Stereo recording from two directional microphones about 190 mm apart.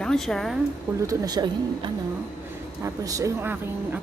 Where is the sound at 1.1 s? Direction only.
20° right (ahead or behind).